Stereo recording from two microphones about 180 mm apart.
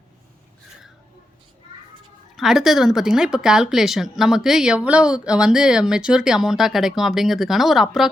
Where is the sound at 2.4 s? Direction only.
Centre (ahead or behind).